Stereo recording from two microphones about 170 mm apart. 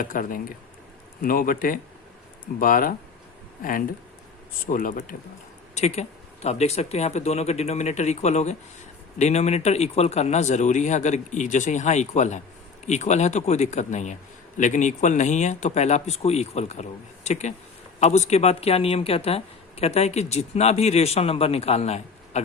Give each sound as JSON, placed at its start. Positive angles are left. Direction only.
{"t": 0.0, "sound": "speech", "side_deg": 55}
{"t": 5.7, "sound": "speech", "side_deg": 40}